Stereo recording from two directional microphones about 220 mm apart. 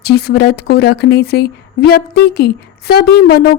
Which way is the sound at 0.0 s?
45° left (ahead or behind).